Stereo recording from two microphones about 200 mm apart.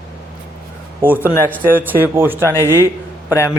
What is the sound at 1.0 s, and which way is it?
Speech, 10° right (ahead or behind).